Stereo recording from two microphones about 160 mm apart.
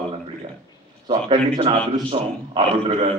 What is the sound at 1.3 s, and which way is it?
A man's voice, 35° right (ahead or behind).